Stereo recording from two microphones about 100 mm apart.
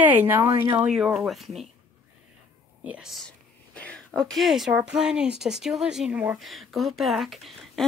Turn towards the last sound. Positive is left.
turn(degrees=0)  # may be behind; listen again after turning